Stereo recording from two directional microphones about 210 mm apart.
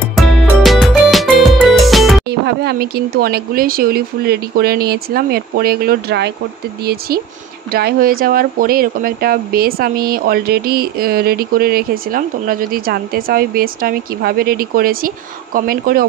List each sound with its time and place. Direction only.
0.1 s music: centre (ahead or behind)
2.2 s speech: 50° right (ahead or behind)
7.7 s speech: 45° right (ahead or behind)